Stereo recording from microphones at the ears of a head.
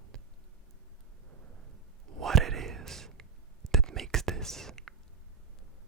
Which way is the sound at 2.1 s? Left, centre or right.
Right.